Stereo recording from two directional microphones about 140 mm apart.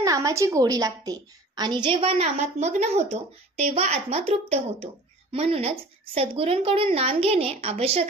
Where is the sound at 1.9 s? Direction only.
45° right (ahead or behind).